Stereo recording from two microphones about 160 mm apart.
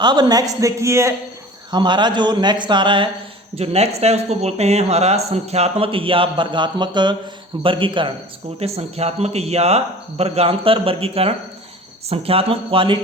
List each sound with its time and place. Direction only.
0.0 s a man's voice: 25° right (ahead or behind)